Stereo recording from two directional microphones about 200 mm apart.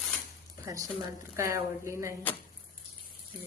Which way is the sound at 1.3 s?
15° right (ahead or behind).